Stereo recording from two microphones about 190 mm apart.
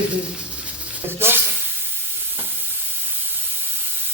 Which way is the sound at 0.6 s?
10° right (ahead or behind).